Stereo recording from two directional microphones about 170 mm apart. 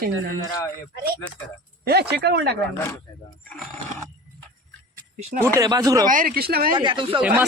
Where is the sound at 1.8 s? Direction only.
70° right (ahead or behind).